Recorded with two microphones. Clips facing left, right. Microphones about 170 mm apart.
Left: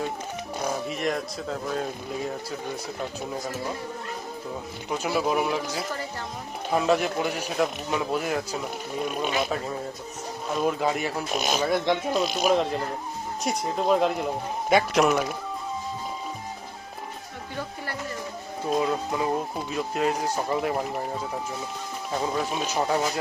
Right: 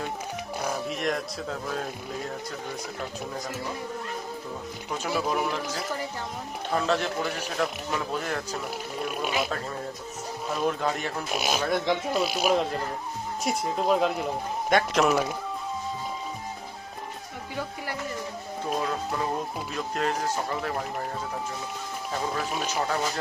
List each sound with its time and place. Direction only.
0.6 s speech: 5° left (ahead or behind)
4.9 s a man's voice: 10° left (ahead or behind)
6.7 s a man's voice: 10° left (ahead or behind); by 9.5 s 5° right (ahead or behind)
10.5 s speech: 5° left (ahead or behind)
11.3 s speech: 5° right (ahead or behind)
18.8 s a man's voice: 10° left (ahead or behind)
20.7 s speech: 5° left (ahead or behind)